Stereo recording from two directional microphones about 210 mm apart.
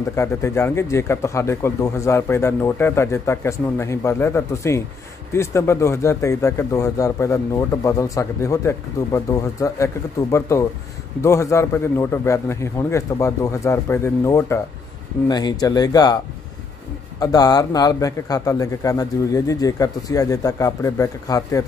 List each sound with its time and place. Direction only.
0.1 s speech: 10° left (ahead or behind)
17.2 s speech: 20° left (ahead or behind)